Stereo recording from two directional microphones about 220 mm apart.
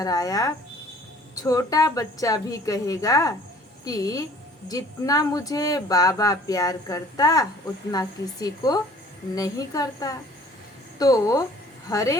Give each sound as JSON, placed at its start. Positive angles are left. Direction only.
{"t": 0.0, "sound": "speech", "side_deg": 15}